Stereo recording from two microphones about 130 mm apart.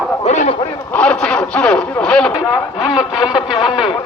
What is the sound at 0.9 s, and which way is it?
Speech, 10° left (ahead or behind).